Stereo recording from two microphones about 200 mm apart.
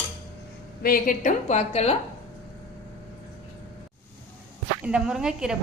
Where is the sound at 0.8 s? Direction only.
45° left (ahead or behind).